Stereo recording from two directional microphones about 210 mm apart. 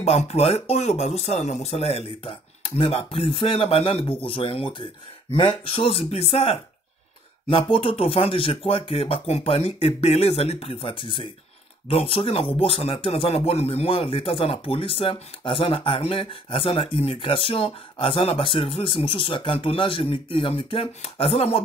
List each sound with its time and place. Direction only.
0.0 s speech: 30° left (ahead or behind)
7.7 s speech: 25° left (ahead or behind)